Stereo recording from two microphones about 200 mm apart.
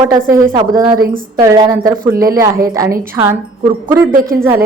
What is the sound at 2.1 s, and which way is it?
Speech, 45° right (ahead or behind).